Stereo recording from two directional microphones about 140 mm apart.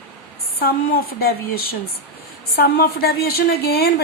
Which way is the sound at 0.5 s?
90° left.